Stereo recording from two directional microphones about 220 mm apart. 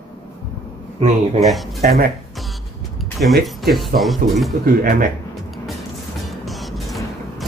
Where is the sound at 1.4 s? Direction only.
Centre (ahead or behind).